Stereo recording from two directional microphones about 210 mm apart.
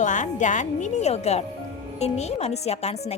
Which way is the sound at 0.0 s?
35° left (ahead or behind).